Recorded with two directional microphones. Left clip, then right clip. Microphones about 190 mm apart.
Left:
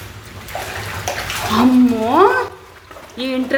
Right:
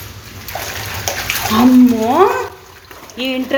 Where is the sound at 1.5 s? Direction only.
Centre (ahead or behind).